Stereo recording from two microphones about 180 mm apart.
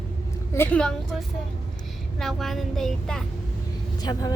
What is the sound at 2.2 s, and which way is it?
Child singing, centre (ahead or behind).